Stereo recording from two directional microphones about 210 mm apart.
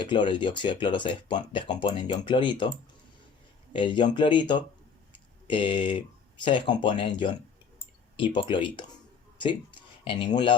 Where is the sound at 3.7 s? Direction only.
20° left (ahead or behind).